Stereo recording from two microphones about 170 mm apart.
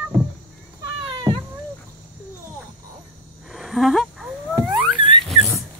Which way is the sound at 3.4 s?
Centre (ahead or behind).